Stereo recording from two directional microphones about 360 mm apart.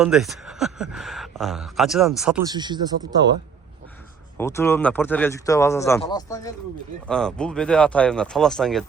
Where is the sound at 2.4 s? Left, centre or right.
Centre.